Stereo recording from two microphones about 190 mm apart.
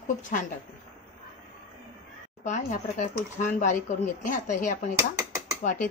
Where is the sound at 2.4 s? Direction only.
40° left (ahead or behind).